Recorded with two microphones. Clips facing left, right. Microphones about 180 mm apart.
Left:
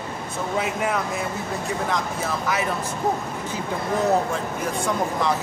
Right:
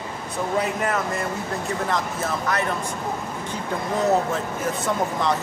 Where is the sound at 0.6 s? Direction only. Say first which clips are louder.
Even; centre (ahead or behind).